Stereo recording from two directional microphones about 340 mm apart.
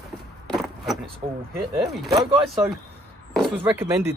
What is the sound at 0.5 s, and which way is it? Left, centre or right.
Speech, centre.